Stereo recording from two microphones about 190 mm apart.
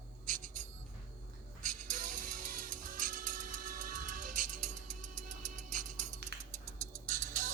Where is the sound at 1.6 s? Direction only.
45° right (ahead or behind).